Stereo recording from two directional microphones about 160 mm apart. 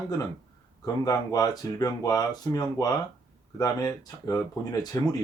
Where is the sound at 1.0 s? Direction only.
20° left (ahead or behind).